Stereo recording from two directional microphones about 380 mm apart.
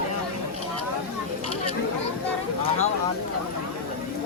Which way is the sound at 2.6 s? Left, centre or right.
Centre.